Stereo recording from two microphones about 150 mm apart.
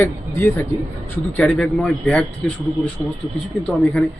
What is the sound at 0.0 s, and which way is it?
A man's voice, 15° left (ahead or behind).